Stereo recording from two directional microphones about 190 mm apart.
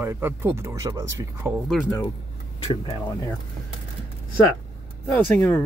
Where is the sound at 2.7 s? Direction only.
30° left (ahead or behind).